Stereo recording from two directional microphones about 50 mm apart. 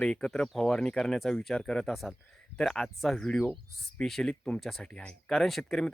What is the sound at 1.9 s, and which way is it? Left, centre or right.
Speech, centre.